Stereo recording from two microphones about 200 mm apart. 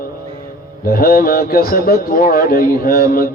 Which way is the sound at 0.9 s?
45° left (ahead or behind).